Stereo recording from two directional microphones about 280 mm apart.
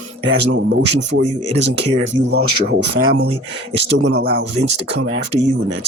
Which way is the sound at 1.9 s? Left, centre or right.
Right.